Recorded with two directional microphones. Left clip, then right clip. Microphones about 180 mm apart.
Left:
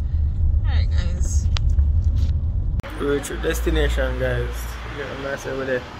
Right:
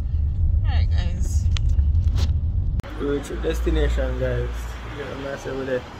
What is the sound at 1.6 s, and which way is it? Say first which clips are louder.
Vehicle: left 3 dB; 35° right (ahead or behind).